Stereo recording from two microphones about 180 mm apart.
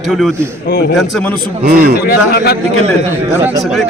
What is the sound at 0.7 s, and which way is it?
Speech, 60° left (ahead or behind).